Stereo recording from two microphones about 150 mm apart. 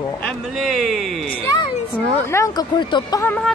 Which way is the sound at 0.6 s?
Centre (ahead or behind).